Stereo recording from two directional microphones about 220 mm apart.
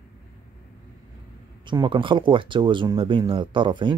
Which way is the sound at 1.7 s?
20° right (ahead or behind).